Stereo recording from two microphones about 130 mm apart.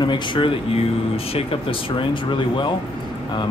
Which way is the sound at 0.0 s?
35° left (ahead or behind).